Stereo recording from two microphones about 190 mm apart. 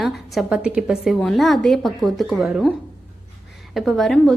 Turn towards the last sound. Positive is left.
turn(degrees=0)  # may be behind; listen again after turning